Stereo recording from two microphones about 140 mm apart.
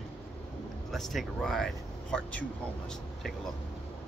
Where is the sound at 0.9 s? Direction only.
Centre (ahead or behind).